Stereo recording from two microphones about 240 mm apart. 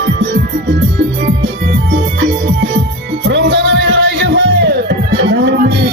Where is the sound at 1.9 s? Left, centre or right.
Right.